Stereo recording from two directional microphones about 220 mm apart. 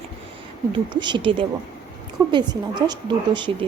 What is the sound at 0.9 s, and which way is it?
A woman's voice, 20° right (ahead or behind).